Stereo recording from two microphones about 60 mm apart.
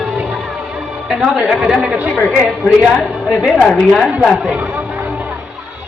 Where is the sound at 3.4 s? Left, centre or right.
Centre.